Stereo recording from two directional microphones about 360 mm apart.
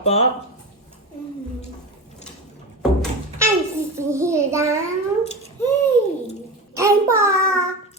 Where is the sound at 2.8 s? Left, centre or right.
Centre.